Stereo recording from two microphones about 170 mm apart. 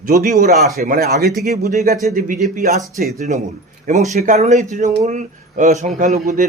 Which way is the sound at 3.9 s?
40° right (ahead or behind).